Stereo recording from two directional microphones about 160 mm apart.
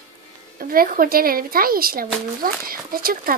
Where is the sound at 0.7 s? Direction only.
65° right (ahead or behind).